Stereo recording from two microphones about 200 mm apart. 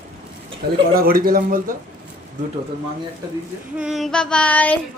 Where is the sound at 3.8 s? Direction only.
Centre (ahead or behind).